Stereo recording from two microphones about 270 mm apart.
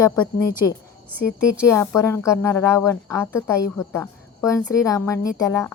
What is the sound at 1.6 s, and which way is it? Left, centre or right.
Speech, centre.